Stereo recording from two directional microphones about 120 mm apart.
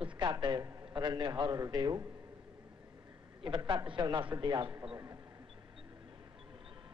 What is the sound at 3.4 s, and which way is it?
A man's voice, 40° right (ahead or behind).